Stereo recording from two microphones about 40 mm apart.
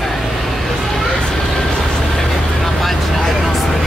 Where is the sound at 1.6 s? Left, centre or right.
Centre.